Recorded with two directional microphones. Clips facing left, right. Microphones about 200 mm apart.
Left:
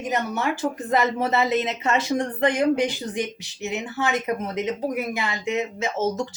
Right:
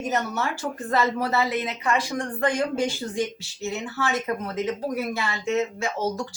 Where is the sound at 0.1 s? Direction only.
15° left (ahead or behind).